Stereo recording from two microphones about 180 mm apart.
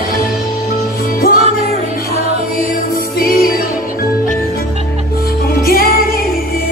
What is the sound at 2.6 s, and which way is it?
Music, 55° left (ahead or behind).